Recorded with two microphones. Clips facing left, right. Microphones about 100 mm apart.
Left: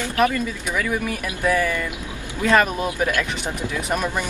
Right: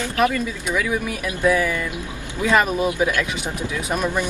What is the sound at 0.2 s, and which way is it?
Speech, centre (ahead or behind).